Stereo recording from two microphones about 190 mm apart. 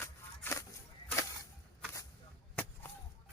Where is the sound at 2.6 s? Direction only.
10° left (ahead or behind).